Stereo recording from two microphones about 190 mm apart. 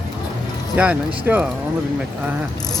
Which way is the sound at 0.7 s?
5° right (ahead or behind).